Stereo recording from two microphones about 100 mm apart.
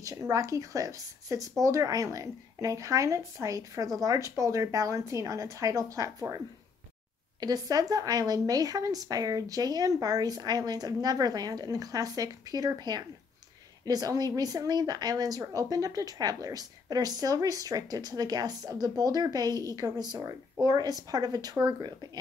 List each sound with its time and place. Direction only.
0.0 s speech: 35° right (ahead or behind)